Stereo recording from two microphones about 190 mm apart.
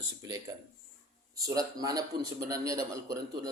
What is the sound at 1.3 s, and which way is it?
A man's voice, 20° right (ahead or behind).